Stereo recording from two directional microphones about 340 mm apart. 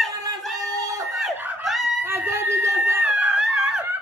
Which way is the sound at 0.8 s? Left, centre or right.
Centre.